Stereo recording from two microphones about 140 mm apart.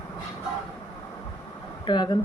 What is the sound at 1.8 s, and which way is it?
Speech, 30° left (ahead or behind).